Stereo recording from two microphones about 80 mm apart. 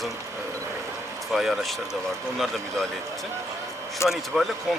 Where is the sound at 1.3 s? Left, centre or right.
Centre.